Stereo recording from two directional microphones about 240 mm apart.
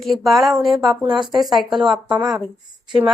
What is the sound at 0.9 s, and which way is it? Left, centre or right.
Speech, centre.